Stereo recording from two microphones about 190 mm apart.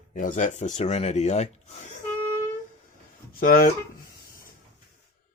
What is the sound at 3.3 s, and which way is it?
Speech, 50° left (ahead or behind).